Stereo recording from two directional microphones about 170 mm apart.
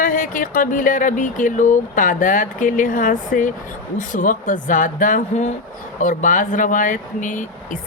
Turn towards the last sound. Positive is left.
turn(degrees=50)  # may be behind; listen again after turning